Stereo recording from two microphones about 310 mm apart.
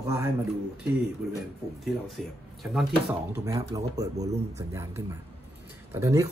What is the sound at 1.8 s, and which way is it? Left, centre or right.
Speech, centre.